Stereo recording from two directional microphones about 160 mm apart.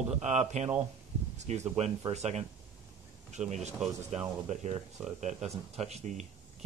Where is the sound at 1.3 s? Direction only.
45° right (ahead or behind).